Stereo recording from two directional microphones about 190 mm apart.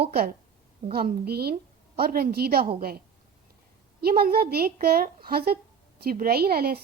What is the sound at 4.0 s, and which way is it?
A woman's voice, 50° right (ahead or behind).